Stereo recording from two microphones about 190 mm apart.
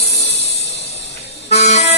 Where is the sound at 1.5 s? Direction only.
35° left (ahead or behind).